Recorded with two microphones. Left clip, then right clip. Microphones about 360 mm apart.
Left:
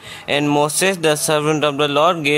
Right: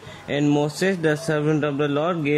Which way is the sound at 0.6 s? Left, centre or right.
Left.